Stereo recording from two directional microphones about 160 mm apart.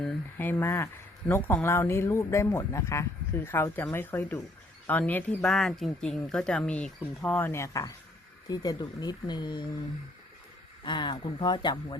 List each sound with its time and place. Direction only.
0.0 s speech: 10° left (ahead or behind); by 9.6 s 30° left (ahead or behind)
10.8 s speech: 30° left (ahead or behind)